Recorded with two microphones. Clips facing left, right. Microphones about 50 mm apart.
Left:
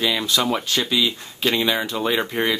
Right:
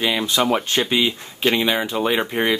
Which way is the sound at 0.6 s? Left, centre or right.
Right.